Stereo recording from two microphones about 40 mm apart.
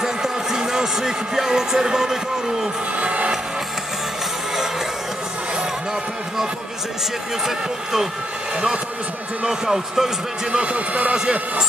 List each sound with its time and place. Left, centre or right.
0.0 s a sound: centre
3.0 s music: right
7.4 s speech: centre
9.5 s speech: centre
10.5 s speech: right